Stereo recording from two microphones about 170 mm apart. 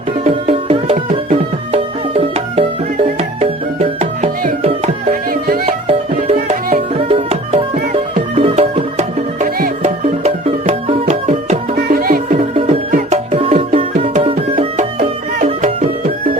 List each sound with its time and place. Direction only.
0.3 s music: 35° right (ahead or behind)
5.3 s music: 60° right (ahead or behind)
5.9 s music: 35° right (ahead or behind)
9.6 s music: 60° right (ahead or behind)
10.2 s music: 40° right (ahead or behind)
11.9 s music: 60° right (ahead or behind)
12.5 s music: 35° right (ahead or behind)
15.4 s music: 40° right (ahead or behind)